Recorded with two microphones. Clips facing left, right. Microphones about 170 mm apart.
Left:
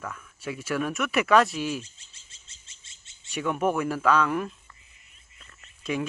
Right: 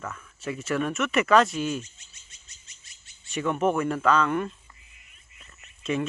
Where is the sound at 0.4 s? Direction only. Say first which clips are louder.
Right 1 dB; 5° left (ahead or behind).